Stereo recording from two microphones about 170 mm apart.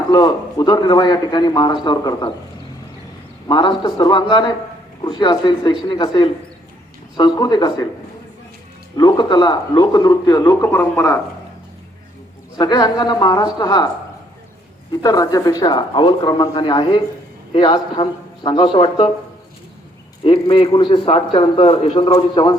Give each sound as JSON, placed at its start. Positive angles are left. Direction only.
{"t": 0.1, "sound": "a man's voice", "side_deg": 25}
{"t": 3.5, "sound": "a man's voice", "side_deg": 30}
{"t": 9.0, "sound": "a man's voice", "side_deg": 25}
{"t": 12.5, "sound": "a man's voice", "side_deg": 25}
{"t": 15.0, "sound": "a man's voice", "side_deg": 20}
{"t": 20.2, "sound": "a man's voice", "side_deg": 30}